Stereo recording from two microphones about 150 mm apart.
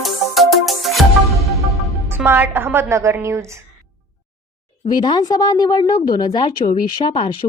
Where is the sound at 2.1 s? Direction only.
15° right (ahead or behind).